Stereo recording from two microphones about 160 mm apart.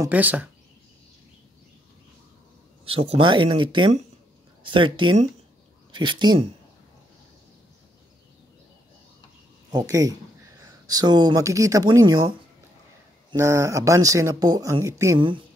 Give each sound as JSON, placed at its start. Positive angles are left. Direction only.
{"t": 0.1, "sound": "speech", "side_deg": -10}
{"t": 2.8, "sound": "speech", "side_deg": -35}
{"t": 9.7, "sound": "speech", "side_deg": -20}
{"t": 13.3, "sound": "speech", "side_deg": -20}
{"t": 15.1, "sound": "speech", "side_deg": -30}